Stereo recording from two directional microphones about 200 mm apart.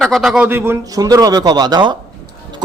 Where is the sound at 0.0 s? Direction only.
Centre (ahead or behind).